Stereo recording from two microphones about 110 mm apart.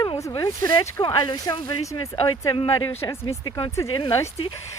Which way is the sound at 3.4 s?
40° left (ahead or behind).